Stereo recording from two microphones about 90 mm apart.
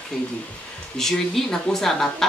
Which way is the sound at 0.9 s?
5° left (ahead or behind).